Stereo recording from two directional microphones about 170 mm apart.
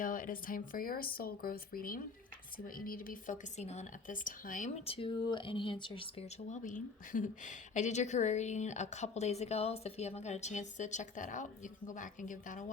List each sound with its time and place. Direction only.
0.0 s a woman's voice: 55° left (ahead or behind)
4.9 s speech: 30° left (ahead or behind)
6.5 s a woman's voice: 50° left (ahead or behind)